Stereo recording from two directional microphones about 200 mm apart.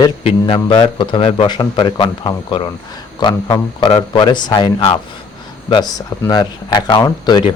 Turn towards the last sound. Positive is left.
turn(degrees=20)  # may be behind; listen again after turning